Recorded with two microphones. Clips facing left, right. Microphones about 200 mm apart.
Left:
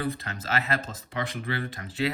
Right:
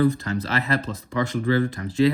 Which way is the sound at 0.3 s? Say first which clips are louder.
Right 5 dB; 35° right (ahead or behind).